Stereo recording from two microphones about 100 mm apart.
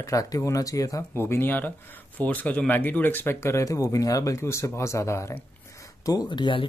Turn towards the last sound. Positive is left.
turn(degrees=50)  # may be behind; listen again after turning